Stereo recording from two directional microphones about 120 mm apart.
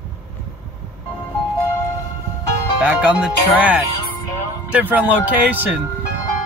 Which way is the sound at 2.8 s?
10° right (ahead or behind).